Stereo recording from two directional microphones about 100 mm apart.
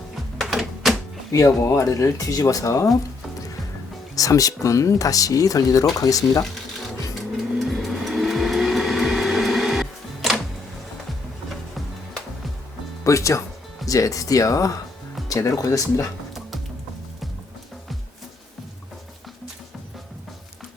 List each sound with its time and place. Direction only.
0.3 s a sound: centre (ahead or behind)
1.3 s speech: 30° left (ahead or behind)
4.1 s speech: 35° left (ahead or behind)
6.4 s music: 5° left (ahead or behind)
11.4 s music: centre (ahead or behind)
13.1 s speech: 30° left (ahead or behind)